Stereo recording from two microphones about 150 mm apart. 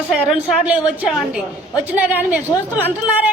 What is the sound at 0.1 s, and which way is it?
A woman's voice, 5° right (ahead or behind).